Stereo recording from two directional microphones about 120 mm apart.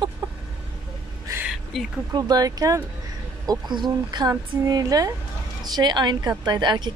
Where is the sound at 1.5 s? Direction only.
Centre (ahead or behind).